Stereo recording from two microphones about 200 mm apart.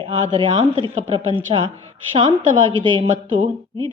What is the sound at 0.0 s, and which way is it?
Speech, 25° right (ahead or behind).